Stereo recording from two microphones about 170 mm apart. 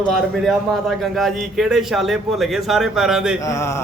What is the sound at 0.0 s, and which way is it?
A man's voice, centre (ahead or behind).